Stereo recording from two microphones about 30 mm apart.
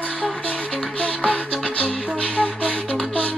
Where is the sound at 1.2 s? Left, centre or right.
Left.